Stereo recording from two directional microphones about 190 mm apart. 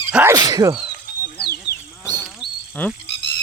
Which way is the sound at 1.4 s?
55° left (ahead or behind).